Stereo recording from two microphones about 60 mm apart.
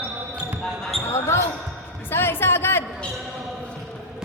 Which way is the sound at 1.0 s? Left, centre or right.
Left.